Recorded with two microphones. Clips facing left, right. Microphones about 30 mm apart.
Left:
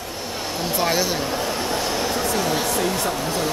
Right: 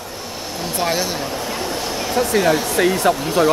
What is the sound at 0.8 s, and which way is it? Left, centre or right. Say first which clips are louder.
Speech: right 1 dB; centre.